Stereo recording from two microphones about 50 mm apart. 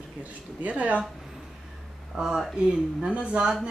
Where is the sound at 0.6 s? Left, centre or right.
Right.